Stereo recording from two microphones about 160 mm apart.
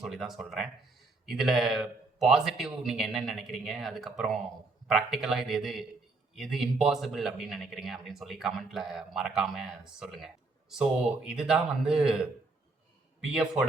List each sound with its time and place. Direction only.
0.0 s speech: centre (ahead or behind)
13.2 s speech: 5° right (ahead or behind)